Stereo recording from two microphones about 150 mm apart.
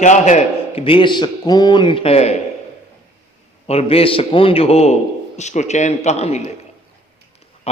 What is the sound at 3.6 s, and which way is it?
A man's voice, 45° left (ahead or behind).